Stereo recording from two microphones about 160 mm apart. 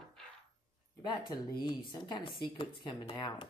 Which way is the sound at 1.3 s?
25° left (ahead or behind).